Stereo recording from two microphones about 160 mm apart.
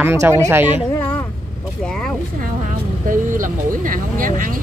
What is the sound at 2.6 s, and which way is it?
Vehicle, 55° right (ahead or behind).